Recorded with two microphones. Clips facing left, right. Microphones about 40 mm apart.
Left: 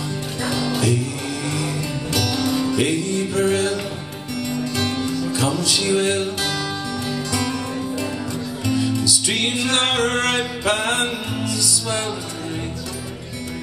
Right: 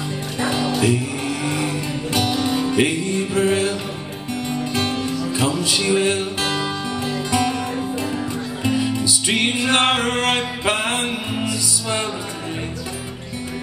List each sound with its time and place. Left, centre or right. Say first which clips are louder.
0.4 s music: right 3 dB; right